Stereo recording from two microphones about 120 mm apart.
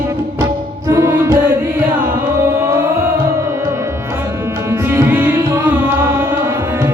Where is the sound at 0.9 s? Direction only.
25° right (ahead or behind).